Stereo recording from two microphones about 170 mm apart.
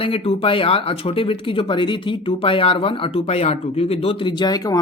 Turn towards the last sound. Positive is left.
turn(degrees=20)  # may be behind; listen again after turning